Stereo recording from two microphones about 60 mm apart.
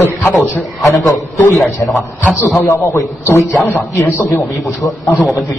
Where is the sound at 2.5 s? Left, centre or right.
Left.